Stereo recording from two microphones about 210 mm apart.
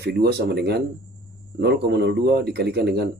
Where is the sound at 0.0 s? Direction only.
50° right (ahead or behind).